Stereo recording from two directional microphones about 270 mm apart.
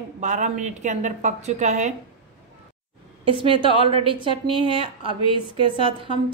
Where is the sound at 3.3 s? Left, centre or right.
Centre.